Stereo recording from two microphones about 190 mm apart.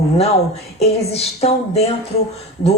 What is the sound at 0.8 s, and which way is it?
A woman's voice, 35° left (ahead or behind).